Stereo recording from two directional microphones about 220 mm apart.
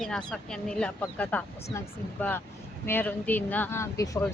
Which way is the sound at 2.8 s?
10° left (ahead or behind).